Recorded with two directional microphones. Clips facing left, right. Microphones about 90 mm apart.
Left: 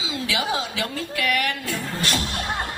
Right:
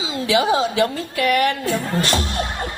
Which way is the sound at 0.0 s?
35° right (ahead or behind).